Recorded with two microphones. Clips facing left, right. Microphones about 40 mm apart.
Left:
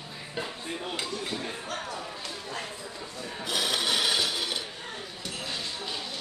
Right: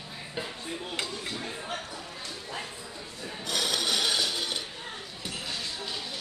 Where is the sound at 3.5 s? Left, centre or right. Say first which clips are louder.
Left 1 dB; centre.